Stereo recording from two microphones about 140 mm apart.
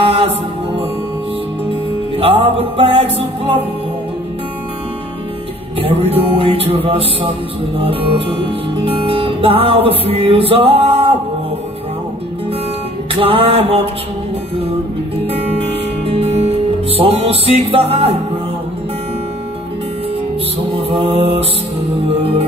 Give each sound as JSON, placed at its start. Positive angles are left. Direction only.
{"t": 0.0, "sound": "music", "side_deg": -45}
{"t": 2.1, "sound": "music", "side_deg": -45}
{"t": 5.8, "sound": "music", "side_deg": -45}
{"t": 13.1, "sound": "music", "side_deg": -40}
{"t": 16.2, "sound": "music", "side_deg": -45}
{"t": 20.9, "sound": "music", "side_deg": -45}